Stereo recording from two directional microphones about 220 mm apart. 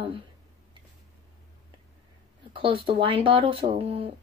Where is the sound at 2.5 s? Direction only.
25° right (ahead or behind).